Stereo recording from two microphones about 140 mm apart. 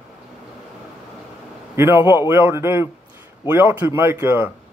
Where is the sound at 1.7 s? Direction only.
15° right (ahead or behind).